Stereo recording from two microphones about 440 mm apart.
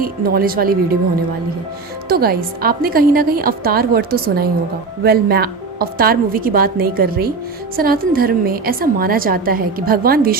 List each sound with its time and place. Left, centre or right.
0.0 s a woman's voice: centre
2.0 s a woman's voice: right